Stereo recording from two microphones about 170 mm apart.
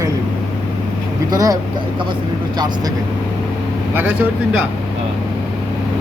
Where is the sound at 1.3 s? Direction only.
20° right (ahead or behind).